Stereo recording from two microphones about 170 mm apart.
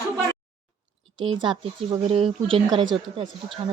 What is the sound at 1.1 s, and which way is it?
Speech, 30° right (ahead or behind).